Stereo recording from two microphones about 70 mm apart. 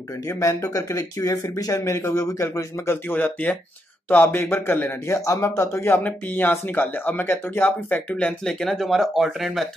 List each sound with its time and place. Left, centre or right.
0.2 s speech: left
5.9 s speech: left
8.2 s speech: centre